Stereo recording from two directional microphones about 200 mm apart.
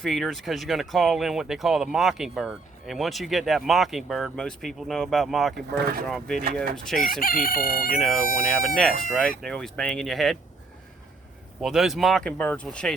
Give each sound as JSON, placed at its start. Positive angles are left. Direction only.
{"t": 0.0, "sound": "speech", "side_deg": 0}
{"t": 5.5, "sound": "speech", "side_deg": -50}
{"t": 6.1, "sound": "speech", "side_deg": 0}
{"t": 7.0, "sound": "chicken", "side_deg": 45}
{"t": 7.9, "sound": "speech", "side_deg": 0}
{"t": 11.6, "sound": "speech", "side_deg": 0}